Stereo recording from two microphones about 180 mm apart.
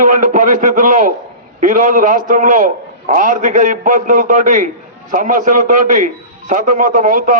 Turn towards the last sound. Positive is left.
turn(degrees=-45)  # may be behind; listen again after turning